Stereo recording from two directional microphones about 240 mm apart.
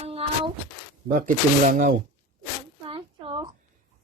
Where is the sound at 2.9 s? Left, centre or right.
Right.